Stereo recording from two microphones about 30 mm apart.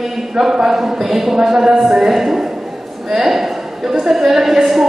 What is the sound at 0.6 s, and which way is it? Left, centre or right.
Speech, centre.